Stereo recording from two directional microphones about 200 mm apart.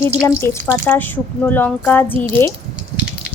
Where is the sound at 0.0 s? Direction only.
10° left (ahead or behind).